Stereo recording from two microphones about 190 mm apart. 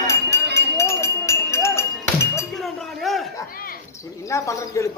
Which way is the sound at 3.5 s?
50° left (ahead or behind).